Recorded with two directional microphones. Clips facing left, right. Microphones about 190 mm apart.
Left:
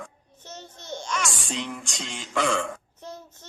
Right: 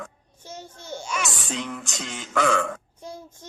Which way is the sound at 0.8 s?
10° right (ahead or behind).